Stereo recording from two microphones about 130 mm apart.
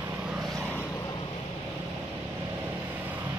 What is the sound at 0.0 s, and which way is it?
Vehicle, 10° right (ahead or behind).